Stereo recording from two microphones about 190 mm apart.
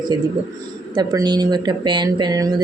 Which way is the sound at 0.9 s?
20° right (ahead or behind).